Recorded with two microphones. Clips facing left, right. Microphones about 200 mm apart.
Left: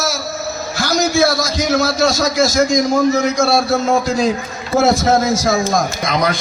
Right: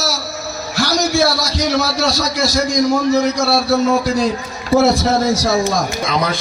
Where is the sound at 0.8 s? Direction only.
50° left (ahead or behind).